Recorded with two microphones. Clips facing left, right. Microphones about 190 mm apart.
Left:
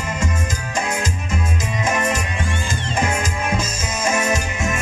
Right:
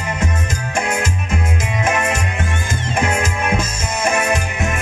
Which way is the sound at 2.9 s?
60° right (ahead or behind).